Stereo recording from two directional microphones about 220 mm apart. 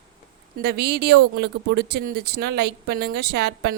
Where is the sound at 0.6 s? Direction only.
45° right (ahead or behind).